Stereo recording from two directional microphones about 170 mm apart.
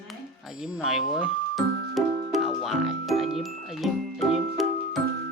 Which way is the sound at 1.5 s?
Centre (ahead or behind).